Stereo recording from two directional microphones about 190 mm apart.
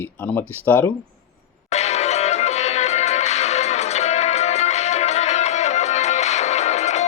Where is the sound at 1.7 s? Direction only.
35° left (ahead or behind).